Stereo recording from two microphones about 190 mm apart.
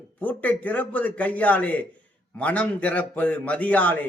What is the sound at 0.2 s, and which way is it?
A man's voice, 10° left (ahead or behind).